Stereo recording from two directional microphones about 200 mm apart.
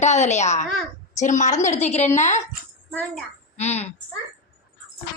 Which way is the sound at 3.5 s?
35° left (ahead or behind).